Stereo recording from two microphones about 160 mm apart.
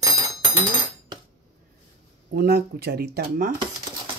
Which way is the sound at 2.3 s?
80° right.